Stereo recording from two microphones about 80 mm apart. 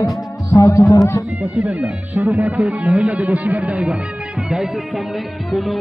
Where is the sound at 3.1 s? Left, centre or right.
Centre.